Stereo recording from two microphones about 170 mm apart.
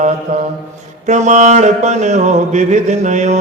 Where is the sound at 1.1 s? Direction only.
45° right (ahead or behind).